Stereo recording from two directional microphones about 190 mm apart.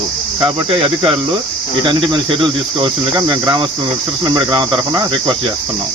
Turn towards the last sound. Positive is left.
turn(degrees=-20)  # may be behind; listen again after turning